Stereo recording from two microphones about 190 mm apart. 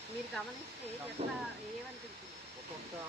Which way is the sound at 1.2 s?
35° right (ahead or behind).